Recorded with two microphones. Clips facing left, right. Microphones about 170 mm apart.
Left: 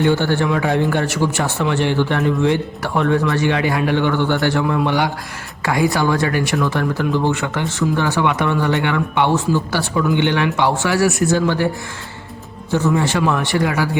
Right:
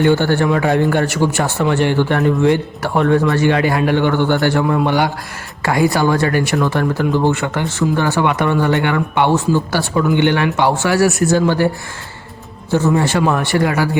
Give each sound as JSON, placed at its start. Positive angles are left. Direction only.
{"t": 0.0, "sound": "speech", "side_deg": -50}
{"t": 12.7, "sound": "a man's voice", "side_deg": -40}